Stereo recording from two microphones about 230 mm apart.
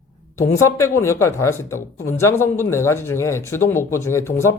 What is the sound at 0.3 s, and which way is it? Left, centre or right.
Speech, centre.